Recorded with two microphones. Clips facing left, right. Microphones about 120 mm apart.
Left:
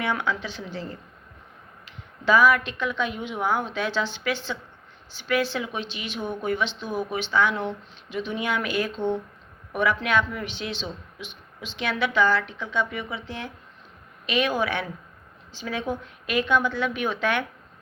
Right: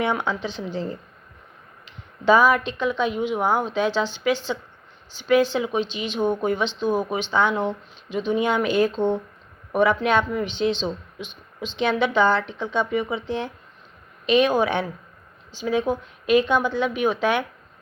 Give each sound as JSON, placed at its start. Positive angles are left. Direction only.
{"t": 0.0, "sound": "speech", "side_deg": -20}
{"t": 2.2, "sound": "a woman's voice", "side_deg": -20}